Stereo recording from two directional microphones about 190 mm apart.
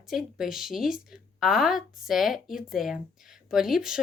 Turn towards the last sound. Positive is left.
turn(degrees=0)  # may be behind; listen again after turning